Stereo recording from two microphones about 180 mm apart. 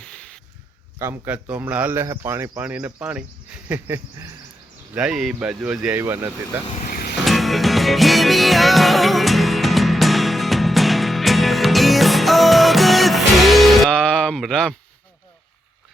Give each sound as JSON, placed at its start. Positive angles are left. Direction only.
{"t": 0.0, "sound": "a sound", "side_deg": 5}
{"t": 0.9, "sound": "speech", "side_deg": -15}
{"t": 6.7, "sound": "vehicle", "side_deg": 50}
{"t": 7.3, "sound": "music", "side_deg": 0}